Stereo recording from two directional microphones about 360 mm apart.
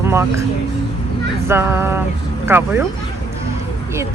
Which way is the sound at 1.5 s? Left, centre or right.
Centre.